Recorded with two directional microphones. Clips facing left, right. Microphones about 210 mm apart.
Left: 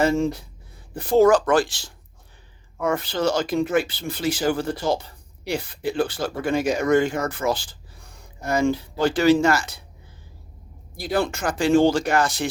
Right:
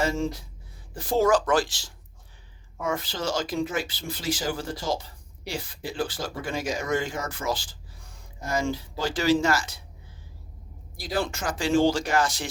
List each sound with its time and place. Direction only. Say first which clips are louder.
0.0 s speech: left 6 dB; 60° left (ahead or behind)
10.9 s speech: left 5 dB; 60° left (ahead or behind)